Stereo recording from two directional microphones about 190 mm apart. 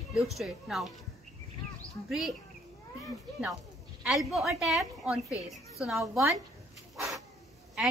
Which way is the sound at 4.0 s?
Centre (ahead or behind).